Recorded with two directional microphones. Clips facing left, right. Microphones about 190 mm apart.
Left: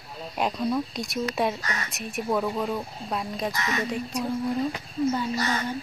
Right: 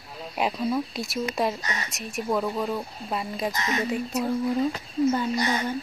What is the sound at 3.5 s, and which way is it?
Speech, 20° right (ahead or behind).